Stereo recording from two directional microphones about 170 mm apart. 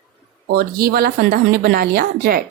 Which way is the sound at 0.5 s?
65° right (ahead or behind).